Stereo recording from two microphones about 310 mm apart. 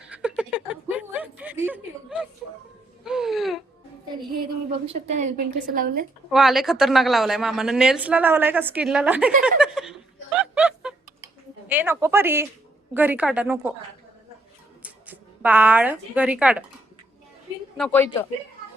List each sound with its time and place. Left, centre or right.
0.1 s a sound: centre
3.0 s music: centre
4.9 s a woman's voice: right
6.3 s speech: centre
9.4 s a sound: centre
11.7 s speech: centre
14.8 s a woman's voice: centre
17.7 s speech: centre